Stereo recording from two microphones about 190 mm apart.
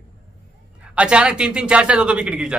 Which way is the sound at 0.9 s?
5° right (ahead or behind).